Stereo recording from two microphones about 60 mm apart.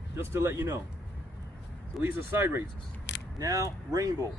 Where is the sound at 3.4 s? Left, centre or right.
Right.